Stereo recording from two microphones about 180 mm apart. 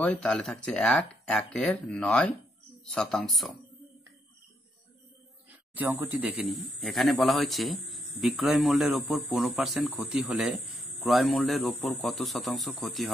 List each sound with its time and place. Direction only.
0.0 s speech: 5° left (ahead or behind)
5.8 s speech: 10° right (ahead or behind)